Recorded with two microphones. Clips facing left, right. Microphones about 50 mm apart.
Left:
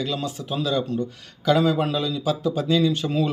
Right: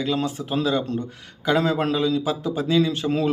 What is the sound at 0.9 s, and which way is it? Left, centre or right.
Speech, right.